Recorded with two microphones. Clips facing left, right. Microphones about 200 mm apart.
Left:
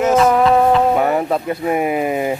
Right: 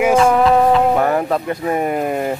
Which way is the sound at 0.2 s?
Centre (ahead or behind).